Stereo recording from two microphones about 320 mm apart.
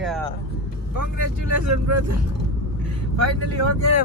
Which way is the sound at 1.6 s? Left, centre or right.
Right.